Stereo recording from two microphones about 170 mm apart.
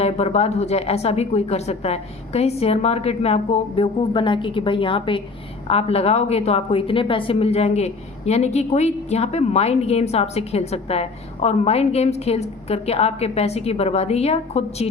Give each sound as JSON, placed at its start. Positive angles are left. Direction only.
{"t": 0.0, "sound": "a woman's voice", "side_deg": 40}